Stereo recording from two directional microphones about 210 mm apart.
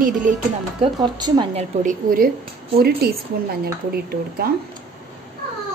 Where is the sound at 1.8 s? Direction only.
40° right (ahead or behind).